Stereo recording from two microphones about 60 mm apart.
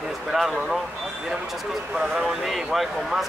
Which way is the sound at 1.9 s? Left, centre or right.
Centre.